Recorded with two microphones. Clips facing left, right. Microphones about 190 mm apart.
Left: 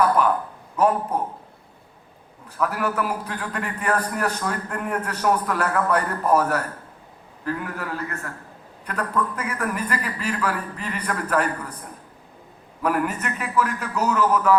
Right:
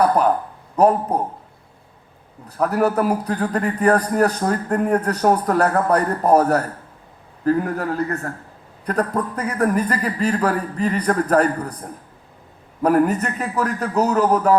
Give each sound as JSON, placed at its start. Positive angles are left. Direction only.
{"t": 0.0, "sound": "a man's voice", "side_deg": -40}
{"t": 2.5, "sound": "a man's voice", "side_deg": -40}